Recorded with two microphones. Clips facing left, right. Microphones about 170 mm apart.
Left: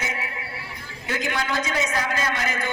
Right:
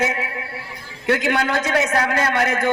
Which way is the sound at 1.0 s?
75° right (ahead or behind).